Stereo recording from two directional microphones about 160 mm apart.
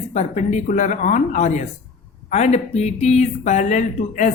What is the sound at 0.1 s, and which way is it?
Speech, 45° left (ahead or behind).